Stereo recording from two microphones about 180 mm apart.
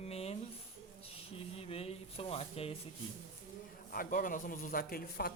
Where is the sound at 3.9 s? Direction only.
50° left (ahead or behind).